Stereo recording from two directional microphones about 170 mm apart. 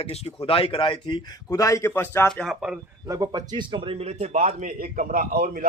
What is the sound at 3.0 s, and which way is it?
Speech, 20° right (ahead or behind).